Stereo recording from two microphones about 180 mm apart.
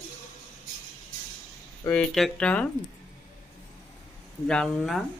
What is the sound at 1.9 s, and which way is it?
Speech, 5° left (ahead or behind).